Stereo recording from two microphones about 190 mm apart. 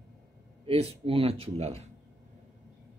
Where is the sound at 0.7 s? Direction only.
30° right (ahead or behind).